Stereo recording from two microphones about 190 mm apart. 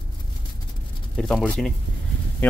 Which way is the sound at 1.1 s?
5° left (ahead or behind).